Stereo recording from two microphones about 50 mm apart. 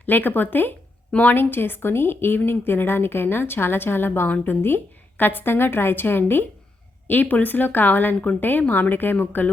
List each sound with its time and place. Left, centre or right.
0.0 s a woman's voice: left
7.1 s speech: left